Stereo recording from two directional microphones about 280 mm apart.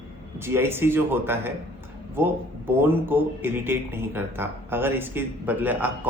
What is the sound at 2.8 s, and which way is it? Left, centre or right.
Speech, centre.